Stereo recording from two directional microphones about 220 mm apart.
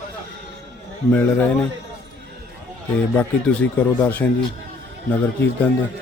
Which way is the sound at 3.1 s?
5° left (ahead or behind).